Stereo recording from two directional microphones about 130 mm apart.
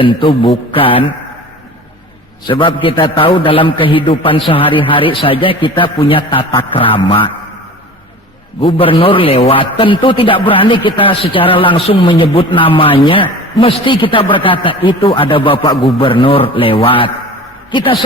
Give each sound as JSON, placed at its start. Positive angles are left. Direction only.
{"t": 0.0, "sound": "a man's voice", "side_deg": 40}
{"t": 2.5, "sound": "a man's voice", "side_deg": 40}
{"t": 8.6, "sound": "a man's voice", "side_deg": 45}